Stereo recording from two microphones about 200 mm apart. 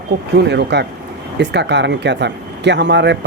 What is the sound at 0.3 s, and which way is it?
Speech, 60° right (ahead or behind).